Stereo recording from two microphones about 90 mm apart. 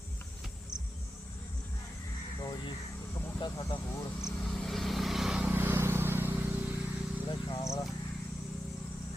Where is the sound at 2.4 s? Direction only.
50° left (ahead or behind).